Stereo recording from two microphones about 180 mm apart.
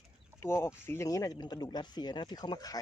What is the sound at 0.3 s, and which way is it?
Speech, 15° left (ahead or behind).